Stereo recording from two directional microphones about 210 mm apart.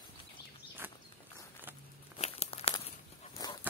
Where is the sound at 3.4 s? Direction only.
15° left (ahead or behind).